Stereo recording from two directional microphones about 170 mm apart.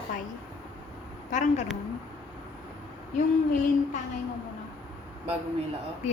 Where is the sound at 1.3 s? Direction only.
45° left (ahead or behind).